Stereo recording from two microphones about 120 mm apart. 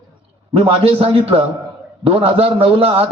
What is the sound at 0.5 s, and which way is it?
A man's voice, 55° right (ahead or behind).